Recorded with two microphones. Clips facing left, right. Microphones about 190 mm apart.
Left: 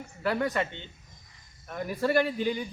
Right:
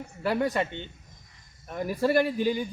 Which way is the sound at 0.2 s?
25° right (ahead or behind).